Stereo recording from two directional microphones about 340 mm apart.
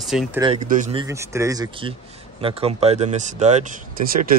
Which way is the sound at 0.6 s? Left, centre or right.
Right.